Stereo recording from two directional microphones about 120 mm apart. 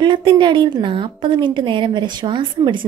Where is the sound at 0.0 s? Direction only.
40° right (ahead or behind).